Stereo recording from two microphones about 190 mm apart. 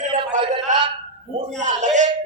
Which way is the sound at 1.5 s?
40° right (ahead or behind).